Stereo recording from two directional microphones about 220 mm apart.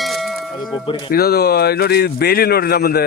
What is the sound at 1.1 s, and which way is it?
Speech, 45° left (ahead or behind).